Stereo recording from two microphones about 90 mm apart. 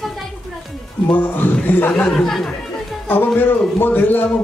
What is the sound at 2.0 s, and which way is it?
Speech, 5° left (ahead or behind).